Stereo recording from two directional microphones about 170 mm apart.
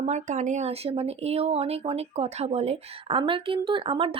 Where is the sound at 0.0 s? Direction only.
45° right (ahead or behind).